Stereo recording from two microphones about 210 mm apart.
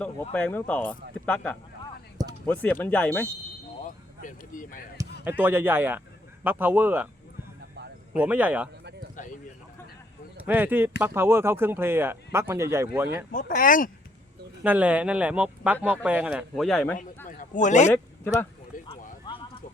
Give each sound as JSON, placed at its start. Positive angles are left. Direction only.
{"t": 0.3, "sound": "speech", "side_deg": 5}
{"t": 3.8, "sound": "speech", "side_deg": 40}
{"t": 5.4, "sound": "speech", "side_deg": -10}
{"t": 8.1, "sound": "speech", "side_deg": -5}
{"t": 9.1, "sound": "clip-clop", "side_deg": 40}
{"t": 10.4, "sound": "speech", "side_deg": -10}
{"t": 13.3, "sound": "speech", "side_deg": 40}
{"t": 14.6, "sound": "speech", "side_deg": -5}
{"t": 17.2, "sound": "a sound", "side_deg": 40}
{"t": 19.3, "sound": "a sound", "side_deg": 20}